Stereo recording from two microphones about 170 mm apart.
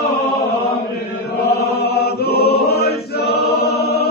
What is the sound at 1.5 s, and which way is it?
Chant, 70° left (ahead or behind).